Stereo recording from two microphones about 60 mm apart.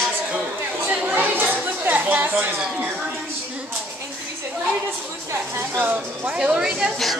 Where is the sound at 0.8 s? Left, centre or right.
Right.